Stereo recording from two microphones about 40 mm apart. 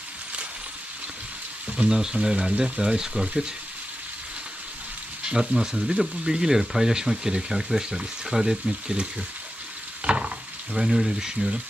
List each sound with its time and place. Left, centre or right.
1.9 s speech: centre
5.3 s speech: centre
10.0 s a sound: right
10.8 s speech: centre